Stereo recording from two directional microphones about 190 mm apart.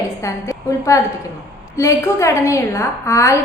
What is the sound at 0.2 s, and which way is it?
A woman's voice, 15° left (ahead or behind).